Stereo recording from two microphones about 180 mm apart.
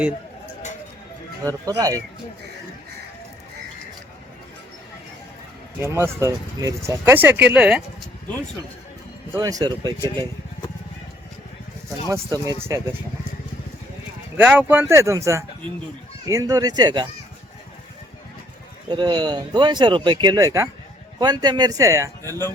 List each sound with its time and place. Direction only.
1.5 s speech: 20° right (ahead or behind)
5.8 s speech: 15° right (ahead or behind)
9.3 s speech: 20° right (ahead or behind)
11.9 s speech: 20° right (ahead or behind)
14.3 s speech: 10° right (ahead or behind)
18.9 s speech: 25° right (ahead or behind)